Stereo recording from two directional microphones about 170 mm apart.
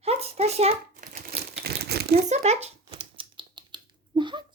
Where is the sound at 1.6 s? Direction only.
70° right (ahead or behind).